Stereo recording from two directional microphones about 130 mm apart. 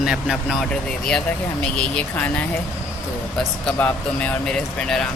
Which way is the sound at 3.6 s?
10° left (ahead or behind).